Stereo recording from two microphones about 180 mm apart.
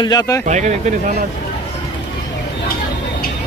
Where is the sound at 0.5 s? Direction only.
40° right (ahead or behind).